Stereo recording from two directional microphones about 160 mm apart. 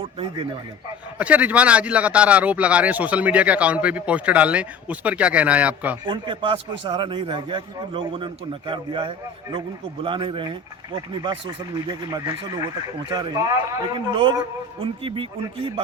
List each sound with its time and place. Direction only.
1.2 s speech: 10° right (ahead or behind)
6.1 s a man's voice: 30° right (ahead or behind)